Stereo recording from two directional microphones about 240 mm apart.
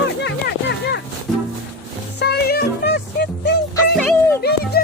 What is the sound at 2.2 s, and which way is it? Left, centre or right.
Music, left.